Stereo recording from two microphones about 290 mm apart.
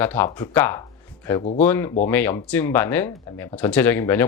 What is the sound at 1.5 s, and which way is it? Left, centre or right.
Speech, centre.